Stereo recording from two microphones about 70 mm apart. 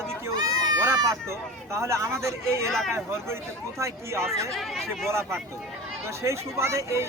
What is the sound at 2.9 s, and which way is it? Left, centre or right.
Speech, right.